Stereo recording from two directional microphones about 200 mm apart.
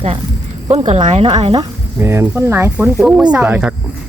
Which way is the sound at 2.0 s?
15° right (ahead or behind).